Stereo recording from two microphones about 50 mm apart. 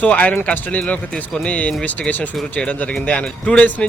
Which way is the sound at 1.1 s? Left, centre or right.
Centre.